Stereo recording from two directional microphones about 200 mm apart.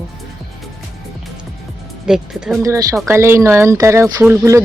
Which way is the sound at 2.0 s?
5° right (ahead or behind).